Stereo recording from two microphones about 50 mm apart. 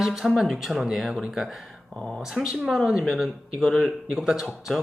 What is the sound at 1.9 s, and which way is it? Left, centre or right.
Speech, centre.